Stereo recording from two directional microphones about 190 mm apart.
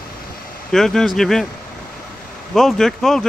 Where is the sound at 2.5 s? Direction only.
Centre (ahead or behind).